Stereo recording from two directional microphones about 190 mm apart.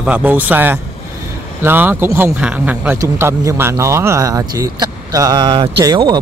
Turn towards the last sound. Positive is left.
turn(degrees=-20)  # may be behind; listen again after turning